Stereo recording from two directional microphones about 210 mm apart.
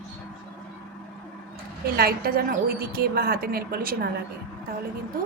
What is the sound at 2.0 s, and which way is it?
A woman's voice, 45° right (ahead or behind).